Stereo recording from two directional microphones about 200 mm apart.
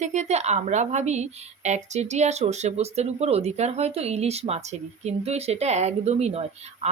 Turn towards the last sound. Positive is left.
turn(degrees=-30)  # may be behind; listen again after turning